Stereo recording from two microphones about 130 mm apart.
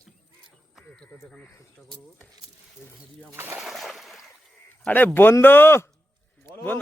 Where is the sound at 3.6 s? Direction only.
Centre (ahead or behind).